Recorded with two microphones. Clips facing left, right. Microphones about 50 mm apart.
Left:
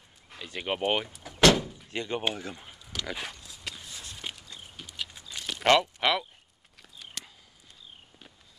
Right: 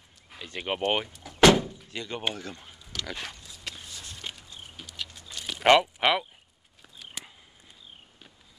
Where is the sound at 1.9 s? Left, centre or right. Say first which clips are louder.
Left 3 dB; left.